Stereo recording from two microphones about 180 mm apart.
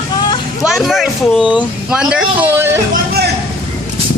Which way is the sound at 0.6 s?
Centre (ahead or behind).